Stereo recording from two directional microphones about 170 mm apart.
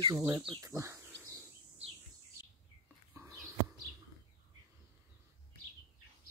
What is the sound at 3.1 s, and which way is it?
Bird, 15° right (ahead or behind).